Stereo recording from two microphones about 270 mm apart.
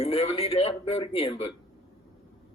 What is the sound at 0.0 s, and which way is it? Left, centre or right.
A man's voice, left.